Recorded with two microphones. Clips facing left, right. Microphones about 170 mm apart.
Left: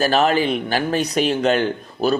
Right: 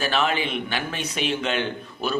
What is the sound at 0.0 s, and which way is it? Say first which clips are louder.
A man's voice: left 7 dB; 40° left (ahead or behind).